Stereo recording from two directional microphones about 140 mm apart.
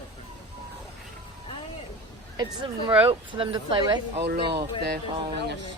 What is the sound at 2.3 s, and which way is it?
Speech, 30° right (ahead or behind).